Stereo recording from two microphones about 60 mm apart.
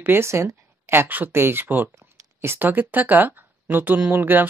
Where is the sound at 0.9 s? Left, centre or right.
Right.